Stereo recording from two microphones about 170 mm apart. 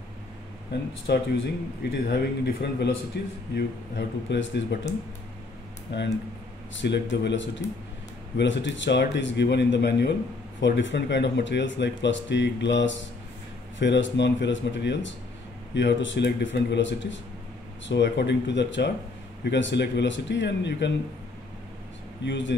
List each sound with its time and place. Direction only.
1.1 s speech: 80° left
3.5 s speech: 90° left
5.9 s speech: 90° left
22.2 s speech: 90° left